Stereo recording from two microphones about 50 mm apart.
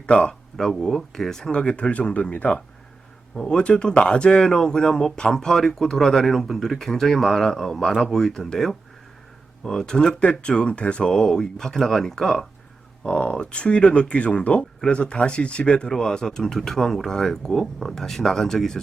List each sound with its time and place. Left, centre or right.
0.0 s speech: centre
0.5 s speech: centre
13.1 s speech: left